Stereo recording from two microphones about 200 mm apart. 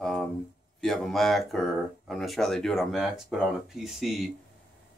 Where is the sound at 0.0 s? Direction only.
Centre (ahead or behind).